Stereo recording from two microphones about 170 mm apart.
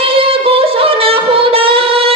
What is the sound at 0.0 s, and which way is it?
Singing, 35° right (ahead or behind).